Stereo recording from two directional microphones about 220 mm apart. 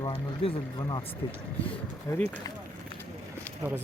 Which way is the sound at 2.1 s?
15° left (ahead or behind).